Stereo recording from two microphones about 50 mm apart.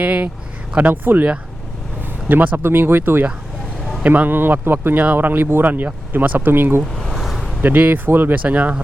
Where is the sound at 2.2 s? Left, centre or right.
Right.